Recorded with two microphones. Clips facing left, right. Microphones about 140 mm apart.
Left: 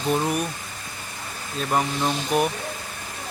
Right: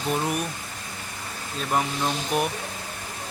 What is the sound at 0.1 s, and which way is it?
Speech, centre (ahead or behind).